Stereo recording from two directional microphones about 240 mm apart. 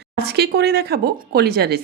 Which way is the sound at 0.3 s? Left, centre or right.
Right.